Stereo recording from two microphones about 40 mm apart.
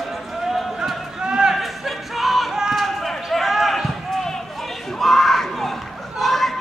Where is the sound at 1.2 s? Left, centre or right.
Centre.